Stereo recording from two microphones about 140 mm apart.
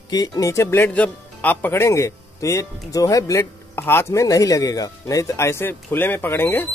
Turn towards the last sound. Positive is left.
turn(degrees=15)  # may be behind; listen again after turning